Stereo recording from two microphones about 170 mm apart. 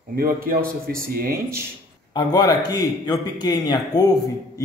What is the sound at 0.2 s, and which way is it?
Speech, 60° right (ahead or behind).